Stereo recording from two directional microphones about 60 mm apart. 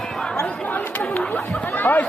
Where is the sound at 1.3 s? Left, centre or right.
Left.